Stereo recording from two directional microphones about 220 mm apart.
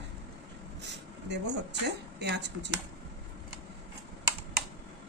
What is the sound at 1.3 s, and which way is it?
Speech, 50° right (ahead or behind).